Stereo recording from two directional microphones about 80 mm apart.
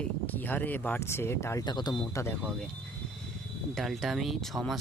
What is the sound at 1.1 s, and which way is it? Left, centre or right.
Speech, left.